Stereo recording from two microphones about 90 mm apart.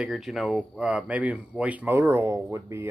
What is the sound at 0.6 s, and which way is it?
Speech, 15° right (ahead or behind).